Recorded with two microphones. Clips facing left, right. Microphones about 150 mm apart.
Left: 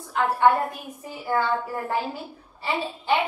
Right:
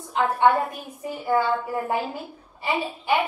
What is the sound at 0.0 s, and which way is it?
A woman's voice, 20° right (ahead or behind).